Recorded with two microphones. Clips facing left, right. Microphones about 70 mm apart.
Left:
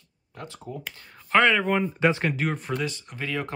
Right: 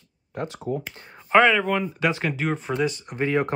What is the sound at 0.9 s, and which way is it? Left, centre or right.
Speech, right.